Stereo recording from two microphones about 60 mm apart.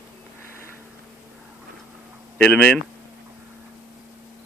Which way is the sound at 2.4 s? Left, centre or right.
Centre.